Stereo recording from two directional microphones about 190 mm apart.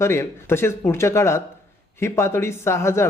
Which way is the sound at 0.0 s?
15° left (ahead or behind).